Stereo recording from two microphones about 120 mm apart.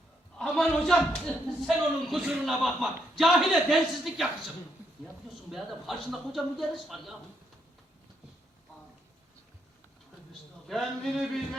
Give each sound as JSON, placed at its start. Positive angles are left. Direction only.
{"t": 0.3, "sound": "a man's voice", "side_deg": 5}
{"t": 10.7, "sound": "a man's voice", "side_deg": 0}